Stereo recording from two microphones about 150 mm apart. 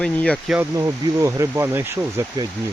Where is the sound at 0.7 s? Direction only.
20° right (ahead or behind).